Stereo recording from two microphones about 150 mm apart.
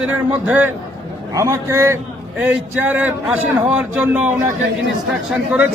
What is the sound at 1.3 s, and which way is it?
A man's voice, 20° right (ahead or behind).